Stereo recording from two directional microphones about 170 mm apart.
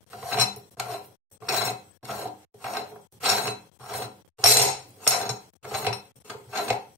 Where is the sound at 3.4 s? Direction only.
5° right (ahead or behind).